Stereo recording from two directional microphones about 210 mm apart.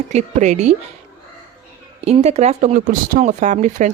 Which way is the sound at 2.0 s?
30° right (ahead or behind).